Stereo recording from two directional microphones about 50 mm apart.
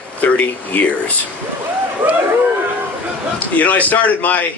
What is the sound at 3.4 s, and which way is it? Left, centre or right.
Speech, left.